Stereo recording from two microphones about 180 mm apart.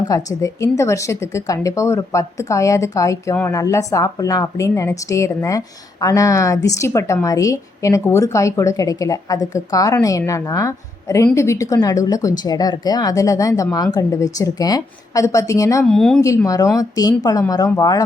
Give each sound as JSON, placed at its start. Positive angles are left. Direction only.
{"t": 0.1, "sound": "a woman's voice", "side_deg": 20}
{"t": 15.8, "sound": "speech", "side_deg": 0}
{"t": 16.2, "sound": "a woman's voice", "side_deg": 15}